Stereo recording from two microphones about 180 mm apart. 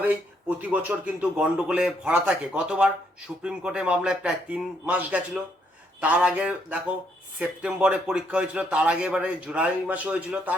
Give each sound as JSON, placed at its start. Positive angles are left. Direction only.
{"t": 0.7, "sound": "a man's voice", "side_deg": -10}